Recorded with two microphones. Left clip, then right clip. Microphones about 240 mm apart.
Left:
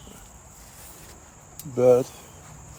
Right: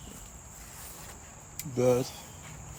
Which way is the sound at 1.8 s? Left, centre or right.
Left.